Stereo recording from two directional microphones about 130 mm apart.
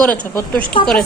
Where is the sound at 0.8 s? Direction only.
40° left (ahead or behind).